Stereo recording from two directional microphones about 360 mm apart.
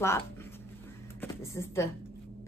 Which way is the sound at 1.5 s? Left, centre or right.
Centre.